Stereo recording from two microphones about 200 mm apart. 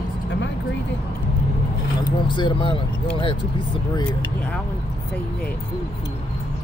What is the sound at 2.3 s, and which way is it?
Speech, 25° left (ahead or behind).